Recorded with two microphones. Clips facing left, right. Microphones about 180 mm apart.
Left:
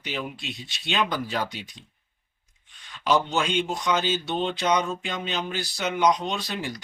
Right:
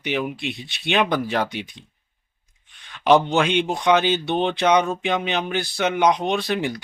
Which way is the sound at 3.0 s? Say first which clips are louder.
Right 7 dB; 60° right (ahead or behind).